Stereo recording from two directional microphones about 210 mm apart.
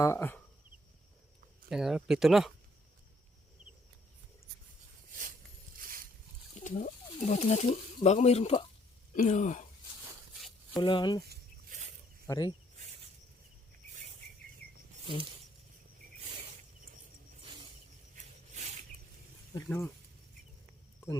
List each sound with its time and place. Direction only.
0.0 s speech: 10° left (ahead or behind)
1.7 s speech: centre (ahead or behind)
5.0 s a sound: 40° right (ahead or behind)
6.5 s speech: 35° left (ahead or behind)
10.8 s speech: 20° left (ahead or behind)
11.2 s a sound: 50° right (ahead or behind)
12.3 s speech: 20° left (ahead or behind)
17.4 s a sound: 25° right (ahead or behind)
19.6 s speech: 5° left (ahead or behind)